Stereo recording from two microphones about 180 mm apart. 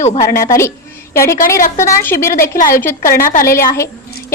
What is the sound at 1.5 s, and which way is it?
Speech, 50° left (ahead or behind).